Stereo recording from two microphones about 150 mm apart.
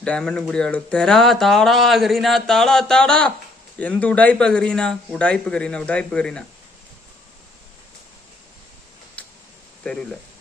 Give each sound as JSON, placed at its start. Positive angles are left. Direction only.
{"t": 0.0, "sound": "speech", "side_deg": 5}
{"t": 9.8, "sound": "speech", "side_deg": 5}